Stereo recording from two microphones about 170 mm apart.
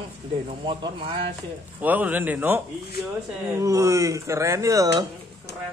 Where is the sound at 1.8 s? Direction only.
10° right (ahead or behind).